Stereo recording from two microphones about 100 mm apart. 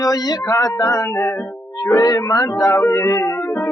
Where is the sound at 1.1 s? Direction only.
5° left (ahead or behind).